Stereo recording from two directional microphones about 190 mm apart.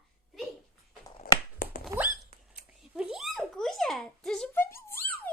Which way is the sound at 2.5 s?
5° right (ahead or behind).